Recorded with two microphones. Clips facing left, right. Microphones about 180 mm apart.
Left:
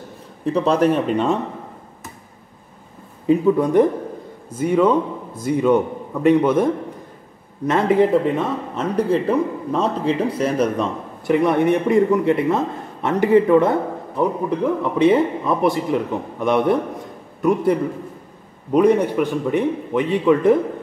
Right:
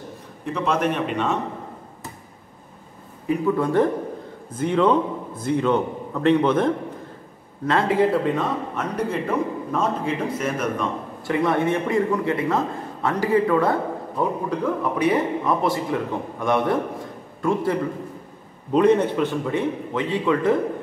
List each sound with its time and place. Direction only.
0.5 s speech: 35° left (ahead or behind)
3.3 s a man's voice: 20° left (ahead or behind)
18.7 s a man's voice: 10° left (ahead or behind)